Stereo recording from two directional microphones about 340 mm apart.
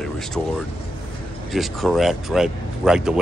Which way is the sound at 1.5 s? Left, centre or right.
Centre.